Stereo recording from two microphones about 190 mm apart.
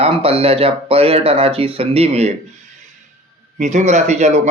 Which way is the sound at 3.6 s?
40° right (ahead or behind).